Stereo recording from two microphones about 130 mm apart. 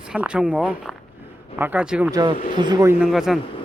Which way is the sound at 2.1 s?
30° right (ahead or behind).